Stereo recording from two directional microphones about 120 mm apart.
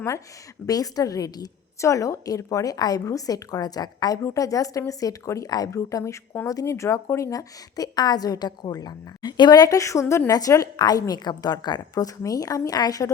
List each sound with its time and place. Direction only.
0.7 s a woman's voice: 30° left (ahead or behind)